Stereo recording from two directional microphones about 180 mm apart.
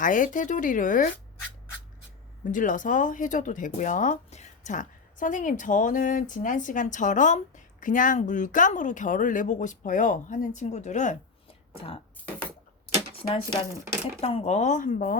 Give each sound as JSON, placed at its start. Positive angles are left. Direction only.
{"t": 0.0, "sound": "speech", "side_deg": 45}
{"t": 2.4, "sound": "speech", "side_deg": 45}
{"t": 14.2, "sound": "speech", "side_deg": 35}